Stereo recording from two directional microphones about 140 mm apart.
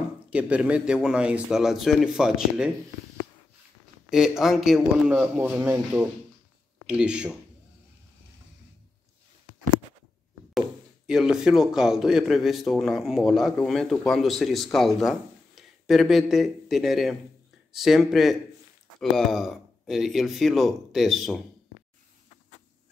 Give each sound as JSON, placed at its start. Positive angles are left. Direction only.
{"t": 0.3, "sound": "speech", "side_deg": -10}
{"t": 4.1, "sound": "speech", "side_deg": -5}
{"t": 11.1, "sound": "speech", "side_deg": -5}